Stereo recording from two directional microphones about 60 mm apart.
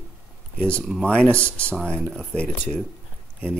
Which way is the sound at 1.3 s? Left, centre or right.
Right.